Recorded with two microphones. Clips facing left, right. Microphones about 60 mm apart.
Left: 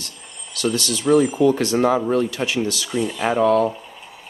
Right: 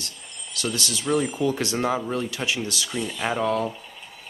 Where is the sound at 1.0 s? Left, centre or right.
Centre.